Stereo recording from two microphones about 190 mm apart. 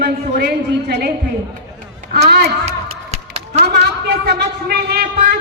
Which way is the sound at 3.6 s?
60° right (ahead or behind).